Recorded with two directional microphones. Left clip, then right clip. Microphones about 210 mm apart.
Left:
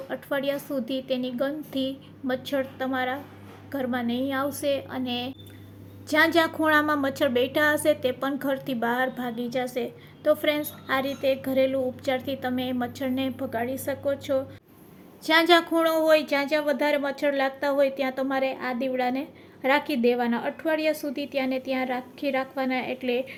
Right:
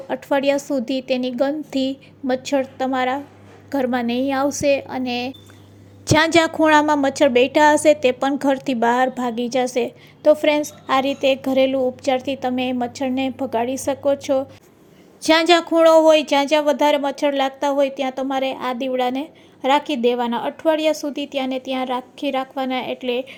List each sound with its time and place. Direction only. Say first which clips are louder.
0.1 s a woman's voice: right 9 dB; 30° right (ahead or behind); by 23.4 s 15° right (ahead or behind)